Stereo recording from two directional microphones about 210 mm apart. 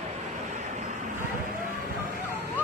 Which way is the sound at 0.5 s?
35° right (ahead or behind).